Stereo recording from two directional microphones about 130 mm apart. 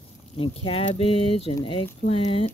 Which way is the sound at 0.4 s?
45° left (ahead or behind).